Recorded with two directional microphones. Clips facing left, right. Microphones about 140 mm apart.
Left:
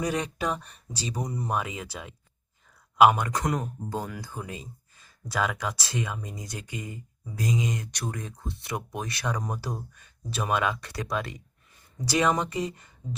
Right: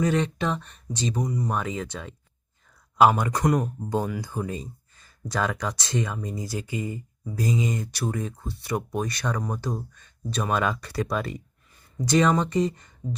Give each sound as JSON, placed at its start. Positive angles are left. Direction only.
{"t": 0.0, "sound": "speech", "side_deg": 10}
{"t": 1.2, "sound": "speech", "side_deg": 25}
{"t": 1.5, "sound": "speech", "side_deg": 5}
{"t": 3.8, "sound": "speech", "side_deg": -20}
{"t": 4.4, "sound": "speech", "side_deg": 0}